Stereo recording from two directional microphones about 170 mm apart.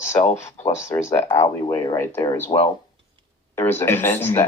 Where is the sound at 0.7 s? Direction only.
15° left (ahead or behind).